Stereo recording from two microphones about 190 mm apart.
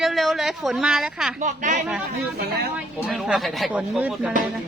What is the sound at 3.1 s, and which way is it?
A woman's voice, centre (ahead or behind).